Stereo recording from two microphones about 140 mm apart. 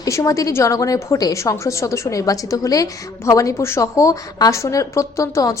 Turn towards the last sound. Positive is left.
turn(degrees=25)  # may be behind; listen again after turning